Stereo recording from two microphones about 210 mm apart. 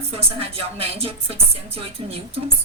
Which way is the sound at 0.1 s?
30° right (ahead or behind).